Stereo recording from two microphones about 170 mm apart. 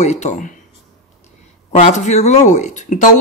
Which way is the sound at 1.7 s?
40° left (ahead or behind).